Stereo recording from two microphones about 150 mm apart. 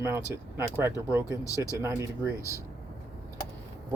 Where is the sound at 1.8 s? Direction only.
20° right (ahead or behind).